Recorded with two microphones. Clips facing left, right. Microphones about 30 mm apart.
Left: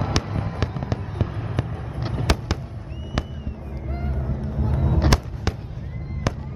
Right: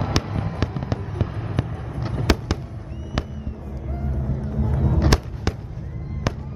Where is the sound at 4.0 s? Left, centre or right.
Left.